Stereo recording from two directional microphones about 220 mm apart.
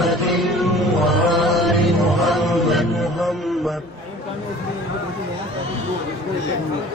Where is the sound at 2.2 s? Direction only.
Centre (ahead or behind).